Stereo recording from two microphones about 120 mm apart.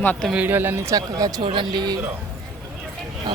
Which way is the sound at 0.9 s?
30° right (ahead or behind).